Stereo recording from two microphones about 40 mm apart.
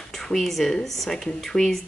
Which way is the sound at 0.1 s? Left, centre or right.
Centre.